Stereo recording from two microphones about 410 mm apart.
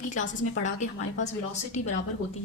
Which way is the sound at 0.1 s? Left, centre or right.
Centre.